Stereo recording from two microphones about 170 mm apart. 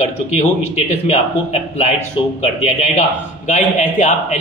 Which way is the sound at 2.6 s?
40° left (ahead or behind).